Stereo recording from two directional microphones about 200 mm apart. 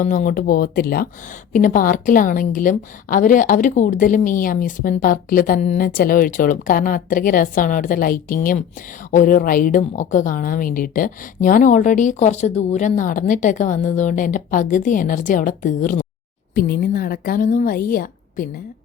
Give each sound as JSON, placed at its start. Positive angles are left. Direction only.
{"t": 0.0, "sound": "a woman's voice", "side_deg": 40}